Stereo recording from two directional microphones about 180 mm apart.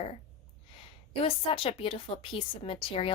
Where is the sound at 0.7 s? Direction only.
30° left (ahead or behind).